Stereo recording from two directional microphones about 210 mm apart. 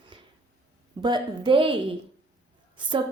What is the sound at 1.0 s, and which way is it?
A woman's voice, 20° right (ahead or behind).